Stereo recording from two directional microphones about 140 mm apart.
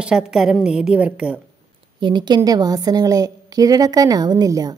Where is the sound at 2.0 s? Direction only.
35° right (ahead or behind).